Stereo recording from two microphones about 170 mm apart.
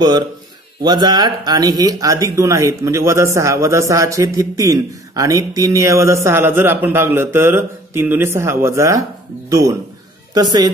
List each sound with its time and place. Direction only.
0.8 s a woman's voice: 25° right (ahead or behind)